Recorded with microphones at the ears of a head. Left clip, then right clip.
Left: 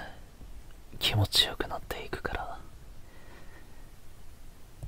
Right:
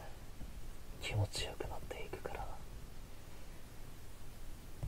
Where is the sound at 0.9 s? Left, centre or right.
Left.